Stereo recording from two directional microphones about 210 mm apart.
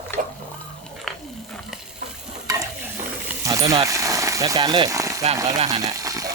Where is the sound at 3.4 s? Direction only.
15° right (ahead or behind).